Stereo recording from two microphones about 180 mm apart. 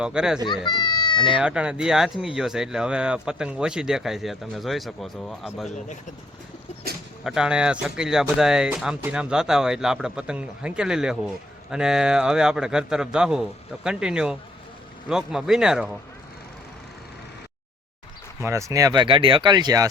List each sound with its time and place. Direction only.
0.0 s speech: 5° right (ahead or behind)
0.4 s a child's voice: 25° left (ahead or behind)
1.4 s speech: 5° right (ahead or behind)
7.3 s speech: 5° right (ahead or behind)
18.4 s speech: 15° right (ahead or behind)